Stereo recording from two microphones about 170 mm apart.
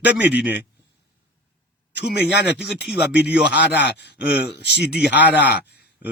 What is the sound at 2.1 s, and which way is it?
Speech, 75° left (ahead or behind).